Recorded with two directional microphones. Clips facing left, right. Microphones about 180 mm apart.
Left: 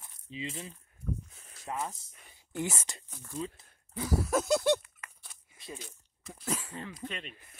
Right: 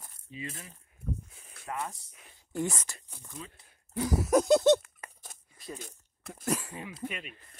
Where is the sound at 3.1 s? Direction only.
15° right (ahead or behind).